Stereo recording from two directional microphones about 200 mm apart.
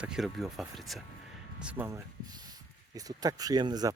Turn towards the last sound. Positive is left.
turn(degrees=-20)  # may be behind; listen again after turning